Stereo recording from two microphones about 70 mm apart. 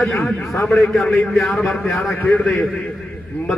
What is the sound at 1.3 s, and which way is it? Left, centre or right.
Speech, centre.